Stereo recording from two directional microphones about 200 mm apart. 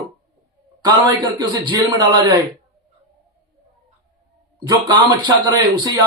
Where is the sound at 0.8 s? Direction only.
20° right (ahead or behind).